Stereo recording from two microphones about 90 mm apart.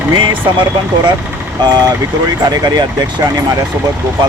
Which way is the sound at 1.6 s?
45° right (ahead or behind).